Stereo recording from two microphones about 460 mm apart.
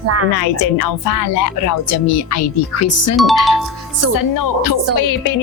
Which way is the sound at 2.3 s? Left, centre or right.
Left.